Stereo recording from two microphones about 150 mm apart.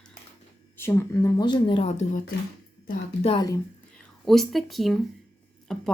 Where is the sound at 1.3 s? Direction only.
30° left (ahead or behind).